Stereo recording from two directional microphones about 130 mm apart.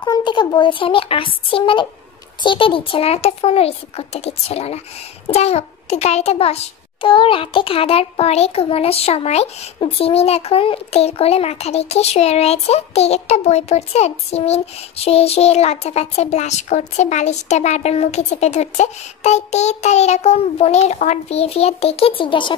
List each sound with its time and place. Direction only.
0.0 s a child's voice: 35° left (ahead or behind)